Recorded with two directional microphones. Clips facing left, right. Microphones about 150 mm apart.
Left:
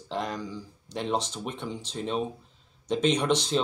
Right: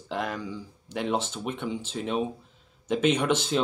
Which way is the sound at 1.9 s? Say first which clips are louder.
Even; 5° right (ahead or behind).